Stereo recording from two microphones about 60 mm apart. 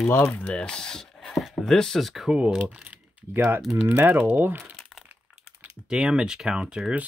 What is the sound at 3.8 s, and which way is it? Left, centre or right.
Speech, right.